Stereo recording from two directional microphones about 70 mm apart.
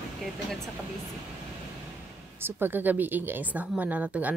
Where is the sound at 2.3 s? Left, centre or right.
Right.